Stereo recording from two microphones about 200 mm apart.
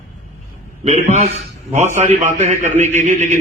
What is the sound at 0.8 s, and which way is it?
A man's voice, 35° right (ahead or behind).